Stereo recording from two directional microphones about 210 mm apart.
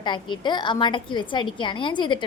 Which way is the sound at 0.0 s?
20° left (ahead or behind).